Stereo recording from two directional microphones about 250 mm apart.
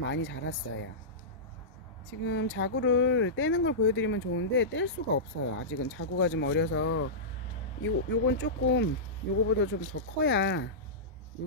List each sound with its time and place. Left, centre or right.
0.0 s speech: left
2.2 s speech: left